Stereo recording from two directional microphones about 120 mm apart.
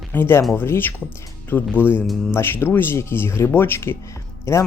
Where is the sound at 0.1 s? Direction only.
20° left (ahead or behind).